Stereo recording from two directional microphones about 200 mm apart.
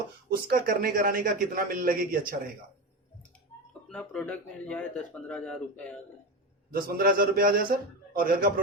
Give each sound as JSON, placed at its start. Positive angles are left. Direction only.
{"t": 0.4, "sound": "a man's voice", "side_deg": -50}
{"t": 3.8, "sound": "speech", "side_deg": 5}
{"t": 6.7, "sound": "a man's voice", "side_deg": -45}